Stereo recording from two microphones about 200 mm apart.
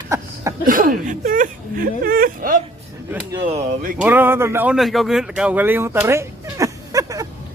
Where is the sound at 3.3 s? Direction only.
25° right (ahead or behind).